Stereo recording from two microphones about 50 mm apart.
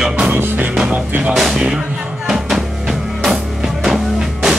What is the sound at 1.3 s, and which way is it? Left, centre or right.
Music, centre.